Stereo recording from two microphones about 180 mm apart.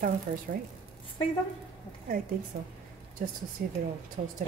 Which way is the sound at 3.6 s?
55° right (ahead or behind).